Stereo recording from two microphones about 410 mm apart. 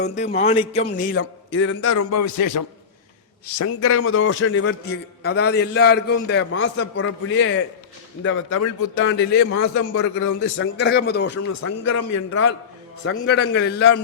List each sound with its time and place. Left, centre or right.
0.0 s a man's voice: centre; by 2.6 s left
3.4 s a man's voice: left
11.3 s speech: left
13.2 s a man's voice: left